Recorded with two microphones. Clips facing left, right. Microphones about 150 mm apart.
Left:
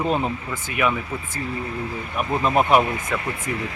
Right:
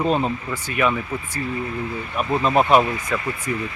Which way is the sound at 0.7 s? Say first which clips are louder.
Right 1 dB; 15° left (ahead or behind).